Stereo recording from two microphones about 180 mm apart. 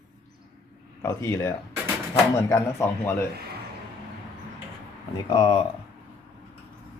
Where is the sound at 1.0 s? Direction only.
15° left (ahead or behind).